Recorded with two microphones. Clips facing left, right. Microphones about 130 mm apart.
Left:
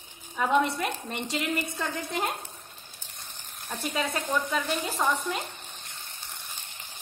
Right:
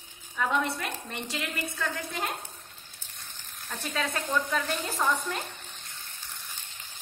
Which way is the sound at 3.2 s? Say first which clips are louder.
Left 3 dB; 20° left (ahead or behind).